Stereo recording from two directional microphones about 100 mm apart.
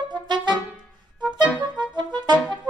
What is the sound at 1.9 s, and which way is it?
Music, 45° right (ahead or behind).